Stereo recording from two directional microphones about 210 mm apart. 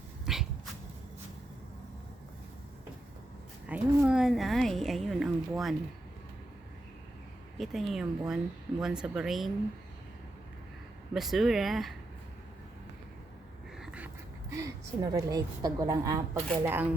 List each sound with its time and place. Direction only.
0.3 s cat: centre (ahead or behind)
3.7 s a woman's voice: 5° right (ahead or behind)
7.6 s a woman's voice: centre (ahead or behind)
11.1 s a woman's voice: centre (ahead or behind)
13.7 s a sound: 5° right (ahead or behind)
14.5 s a woman's voice: 15° right (ahead or behind)